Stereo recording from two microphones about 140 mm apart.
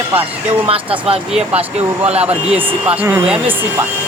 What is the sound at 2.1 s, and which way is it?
Speech, 45° right (ahead or behind).